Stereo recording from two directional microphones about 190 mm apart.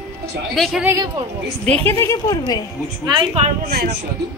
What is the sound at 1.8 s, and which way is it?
Speech, 15° left (ahead or behind).